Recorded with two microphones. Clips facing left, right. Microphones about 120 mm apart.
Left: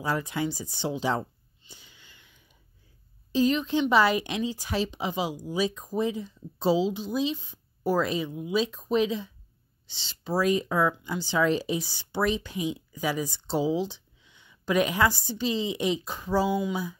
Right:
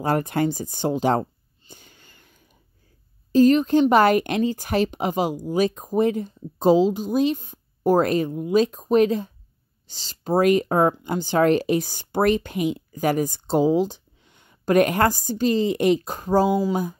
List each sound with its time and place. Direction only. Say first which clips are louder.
0.0 s speech: right 7 dB; 55° right (ahead or behind)
1.7 s sniff: right 5 dB; 50° right (ahead or behind)
3.3 s speech: right 8 dB; 45° right (ahead or behind)